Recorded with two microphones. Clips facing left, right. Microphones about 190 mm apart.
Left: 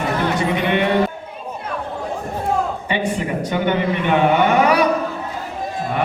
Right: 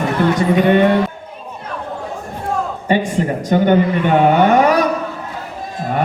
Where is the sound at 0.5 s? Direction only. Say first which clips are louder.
Right 7 dB; 45° right (ahead or behind).